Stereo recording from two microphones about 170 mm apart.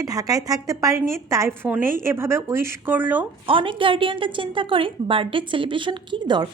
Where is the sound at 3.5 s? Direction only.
30° right (ahead or behind).